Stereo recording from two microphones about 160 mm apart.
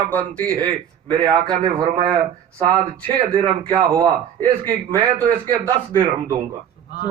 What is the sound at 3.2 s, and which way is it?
A man's voice, 35° right (ahead or behind).